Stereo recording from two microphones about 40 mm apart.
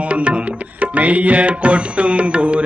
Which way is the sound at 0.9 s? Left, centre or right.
Right.